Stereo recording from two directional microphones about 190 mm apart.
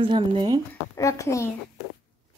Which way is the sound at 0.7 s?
15° left (ahead or behind).